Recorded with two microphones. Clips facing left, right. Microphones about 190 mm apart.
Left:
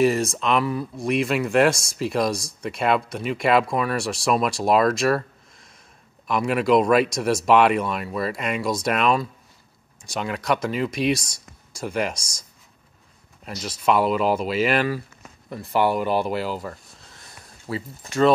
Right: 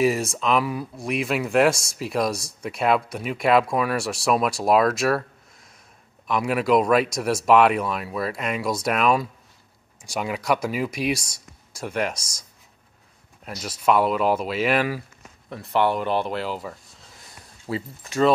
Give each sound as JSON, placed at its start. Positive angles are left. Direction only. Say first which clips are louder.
{"t": 0.0, "sound": "speech", "louder": "left 2 dB", "side_deg": -5}
{"t": 13.5, "sound": "speech", "louder": "even", "side_deg": -5}
{"t": 17.6, "sound": "speech", "louder": "right 1 dB", "side_deg": -20}